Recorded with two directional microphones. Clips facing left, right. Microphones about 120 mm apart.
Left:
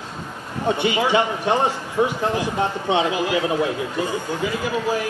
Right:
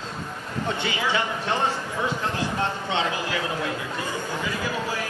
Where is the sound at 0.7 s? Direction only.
15° left (ahead or behind).